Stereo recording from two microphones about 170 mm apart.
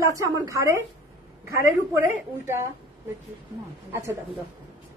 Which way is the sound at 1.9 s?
15° right (ahead or behind).